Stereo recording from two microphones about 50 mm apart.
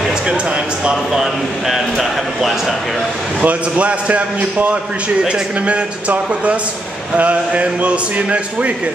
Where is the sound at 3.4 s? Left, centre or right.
Right.